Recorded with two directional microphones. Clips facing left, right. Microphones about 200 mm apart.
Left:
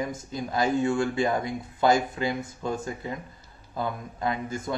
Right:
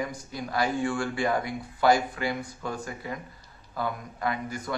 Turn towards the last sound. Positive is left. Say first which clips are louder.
# left 2 dB
turn(degrees=25)  # may be behind; listen again after turning